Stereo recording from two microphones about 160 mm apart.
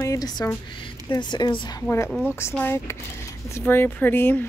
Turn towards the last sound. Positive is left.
turn(degrees=10)  # may be behind; listen again after turning